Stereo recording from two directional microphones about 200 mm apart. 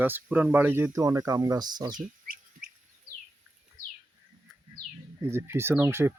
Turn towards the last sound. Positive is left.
turn(degrees=-10)  # may be behind; listen again after turning